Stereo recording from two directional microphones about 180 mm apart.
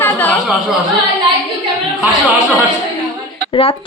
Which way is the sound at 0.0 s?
10° left (ahead or behind).